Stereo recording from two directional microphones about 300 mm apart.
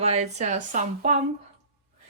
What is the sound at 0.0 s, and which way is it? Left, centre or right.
Speech, right.